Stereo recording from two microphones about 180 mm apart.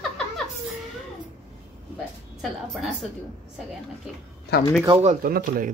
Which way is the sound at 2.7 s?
Centre (ahead or behind).